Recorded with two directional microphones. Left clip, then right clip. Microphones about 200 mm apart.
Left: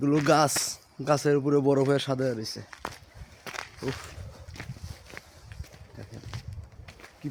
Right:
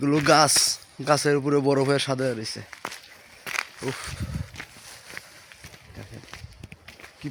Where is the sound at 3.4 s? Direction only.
15° right (ahead or behind).